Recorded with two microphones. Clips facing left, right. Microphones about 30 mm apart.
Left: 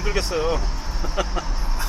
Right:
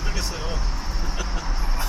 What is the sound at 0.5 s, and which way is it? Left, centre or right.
Vehicle, centre.